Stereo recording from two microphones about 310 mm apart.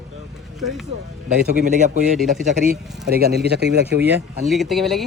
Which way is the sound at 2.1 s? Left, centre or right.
Centre.